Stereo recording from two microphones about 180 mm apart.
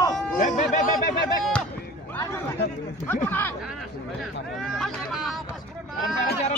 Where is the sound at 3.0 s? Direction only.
10° left (ahead or behind).